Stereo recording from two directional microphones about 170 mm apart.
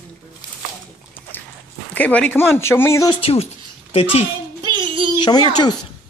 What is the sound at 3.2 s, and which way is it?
A child's voice, 35° left (ahead or behind).